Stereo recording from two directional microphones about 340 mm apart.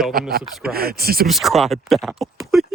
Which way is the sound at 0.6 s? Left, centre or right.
Right.